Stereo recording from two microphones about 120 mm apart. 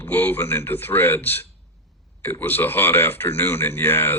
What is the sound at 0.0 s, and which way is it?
Speech, 15° left (ahead or behind).